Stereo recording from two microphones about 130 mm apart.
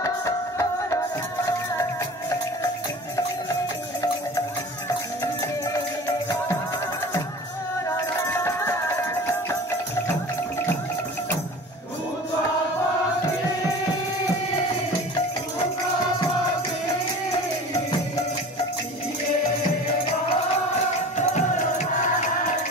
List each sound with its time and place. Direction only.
0.0 s music: 25° left (ahead or behind)
5.2 s music: 25° left (ahead or behind)
8.3 s music: 20° left (ahead or behind)
21.2 s music: 65° left (ahead or behind)